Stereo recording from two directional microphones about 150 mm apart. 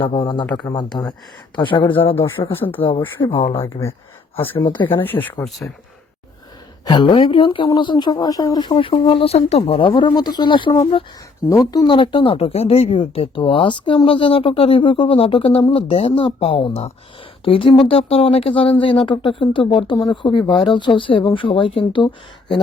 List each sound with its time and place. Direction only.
0.1 s speech: 30° left (ahead or behind)
3.2 s speech: 35° left (ahead or behind)
3.6 s speech: 20° left (ahead or behind)
5.0 s speech: 15° left (ahead or behind)
5.5 s speech: centre (ahead or behind)
6.8 s speech: 30° left (ahead or behind)